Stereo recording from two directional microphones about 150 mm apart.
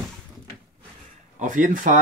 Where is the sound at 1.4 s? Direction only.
60° right (ahead or behind).